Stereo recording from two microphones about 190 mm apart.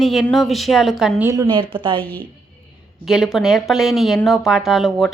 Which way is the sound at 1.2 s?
15° right (ahead or behind).